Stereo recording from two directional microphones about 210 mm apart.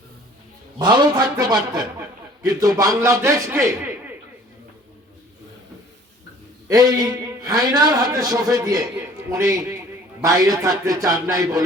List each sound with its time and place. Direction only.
0.8 s a man's voice: 20° right (ahead or behind)
6.7 s a man's voice: 20° right (ahead or behind)